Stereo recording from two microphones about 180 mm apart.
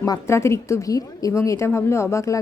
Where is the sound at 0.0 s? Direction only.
15° left (ahead or behind).